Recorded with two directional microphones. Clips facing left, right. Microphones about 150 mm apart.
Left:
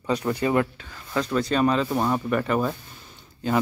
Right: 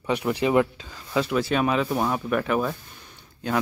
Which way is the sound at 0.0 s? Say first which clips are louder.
Even; 10° right (ahead or behind).